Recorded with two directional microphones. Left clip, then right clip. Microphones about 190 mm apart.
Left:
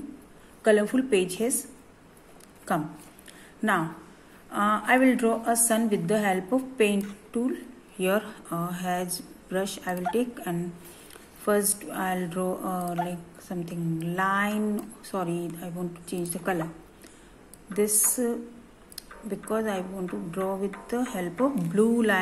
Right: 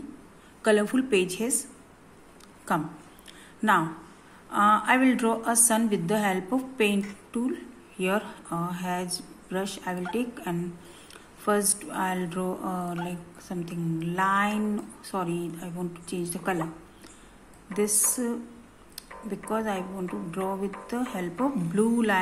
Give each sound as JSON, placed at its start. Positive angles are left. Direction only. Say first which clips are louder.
{"t": 0.6, "sound": "a woman's voice", "louder": "left 1 dB", "side_deg": -5}
{"t": 2.7, "sound": "a woman's voice", "louder": "even", "side_deg": 0}
{"t": 4.5, "sound": "a woman's voice", "louder": "right 2 dB", "side_deg": 0}
{"t": 17.7, "sound": "a woman's voice", "louder": "left 1 dB", "side_deg": 0}